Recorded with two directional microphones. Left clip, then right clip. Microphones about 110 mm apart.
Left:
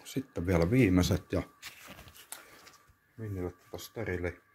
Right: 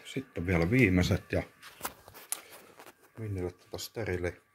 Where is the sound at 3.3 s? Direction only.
25° right (ahead or behind).